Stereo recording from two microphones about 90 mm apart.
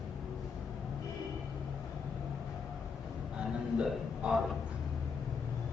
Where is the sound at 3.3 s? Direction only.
10° right (ahead or behind).